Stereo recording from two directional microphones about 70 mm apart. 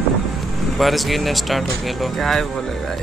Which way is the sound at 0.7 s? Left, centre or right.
Centre.